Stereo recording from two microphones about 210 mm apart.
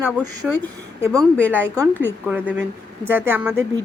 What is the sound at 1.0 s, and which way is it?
Speech, 15° right (ahead or behind).